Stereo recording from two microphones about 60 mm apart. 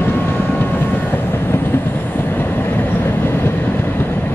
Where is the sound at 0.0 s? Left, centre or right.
Left.